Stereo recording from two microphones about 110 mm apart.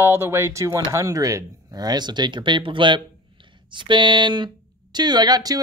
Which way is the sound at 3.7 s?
45° right (ahead or behind).